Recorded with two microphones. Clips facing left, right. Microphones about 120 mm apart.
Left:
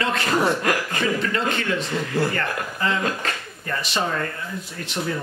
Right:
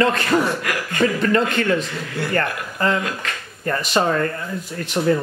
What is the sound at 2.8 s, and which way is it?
Speech, 45° right (ahead or behind).